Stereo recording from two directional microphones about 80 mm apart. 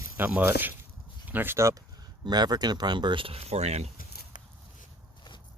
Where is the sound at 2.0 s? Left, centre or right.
Right.